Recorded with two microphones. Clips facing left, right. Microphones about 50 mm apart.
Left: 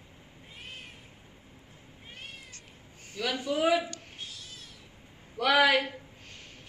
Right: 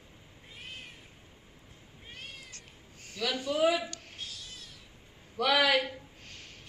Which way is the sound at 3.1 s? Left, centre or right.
Left.